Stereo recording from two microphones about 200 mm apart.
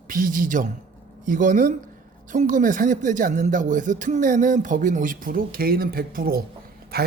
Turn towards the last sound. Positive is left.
turn(degrees=-50)  # may be behind; listen again after turning